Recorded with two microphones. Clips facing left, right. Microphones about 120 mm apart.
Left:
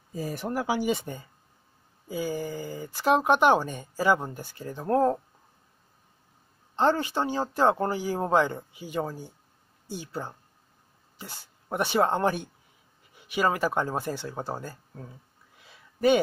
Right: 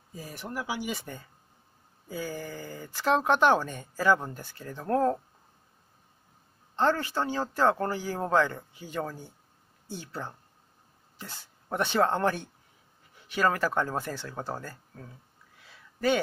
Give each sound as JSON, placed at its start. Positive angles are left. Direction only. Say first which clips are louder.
{"t": 0.1, "sound": "speech", "louder": "left 7 dB", "side_deg": 40}
{"t": 0.9, "sound": "speech", "louder": "left 4 dB", "side_deg": 20}
{"t": 6.8, "sound": "speech", "louder": "left 2 dB", "side_deg": 20}
{"t": 15.6, "sound": "a sound", "louder": "left 5 dB", "side_deg": 20}